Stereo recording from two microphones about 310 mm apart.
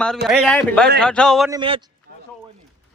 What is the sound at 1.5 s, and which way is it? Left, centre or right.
Speech, centre.